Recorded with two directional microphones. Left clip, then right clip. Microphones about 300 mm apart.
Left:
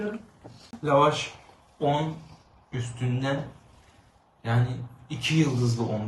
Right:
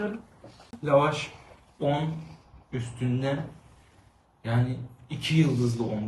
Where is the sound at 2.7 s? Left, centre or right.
Centre.